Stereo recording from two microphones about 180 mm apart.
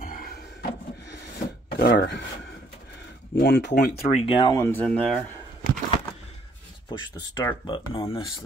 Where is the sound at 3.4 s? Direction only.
65° left (ahead or behind).